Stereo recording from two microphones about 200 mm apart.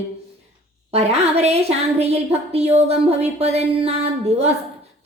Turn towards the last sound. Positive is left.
turn(degrees=-30)  # may be behind; listen again after turning